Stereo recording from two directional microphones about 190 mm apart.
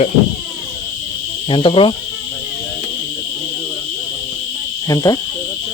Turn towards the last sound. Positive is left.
turn(degrees=20)  # may be behind; listen again after turning